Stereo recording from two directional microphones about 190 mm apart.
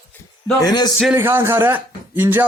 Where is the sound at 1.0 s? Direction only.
10° right (ahead or behind).